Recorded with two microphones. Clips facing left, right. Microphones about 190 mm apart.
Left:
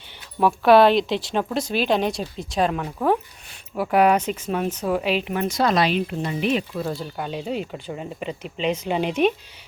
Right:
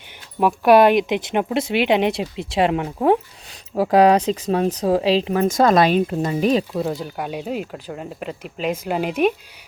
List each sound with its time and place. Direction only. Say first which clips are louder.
0.3 s speech: right 1 dB; 15° right (ahead or behind)
3.8 s speech: right 4 dB; 35° right (ahead or behind)
6.7 s speech: right 4 dB; 15° right (ahead or behind)